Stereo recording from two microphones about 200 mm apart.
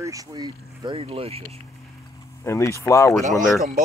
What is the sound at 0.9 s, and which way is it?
Speech, 30° right (ahead or behind).